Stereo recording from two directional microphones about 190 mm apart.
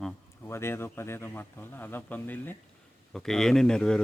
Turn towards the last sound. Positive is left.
turn(degrees=5)  # may be behind; listen again after turning